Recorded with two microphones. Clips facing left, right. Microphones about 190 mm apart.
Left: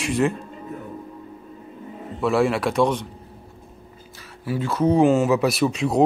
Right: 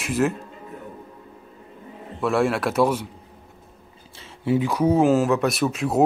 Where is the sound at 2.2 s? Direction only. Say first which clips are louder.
Left 1 dB; centre (ahead or behind).